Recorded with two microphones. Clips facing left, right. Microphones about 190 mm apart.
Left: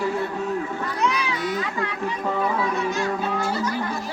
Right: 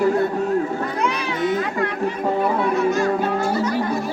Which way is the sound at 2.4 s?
55° right (ahead or behind).